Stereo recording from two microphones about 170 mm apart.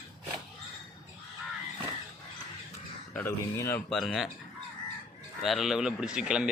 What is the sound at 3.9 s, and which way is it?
Speech, centre (ahead or behind).